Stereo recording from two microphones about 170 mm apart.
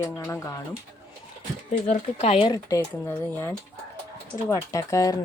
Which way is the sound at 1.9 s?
40° left (ahead or behind).